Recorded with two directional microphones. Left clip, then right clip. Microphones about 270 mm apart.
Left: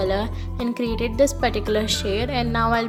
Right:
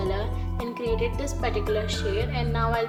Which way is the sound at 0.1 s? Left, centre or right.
Left.